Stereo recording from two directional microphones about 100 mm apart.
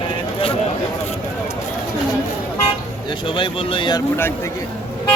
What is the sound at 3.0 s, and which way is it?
Speech, 55° left (ahead or behind).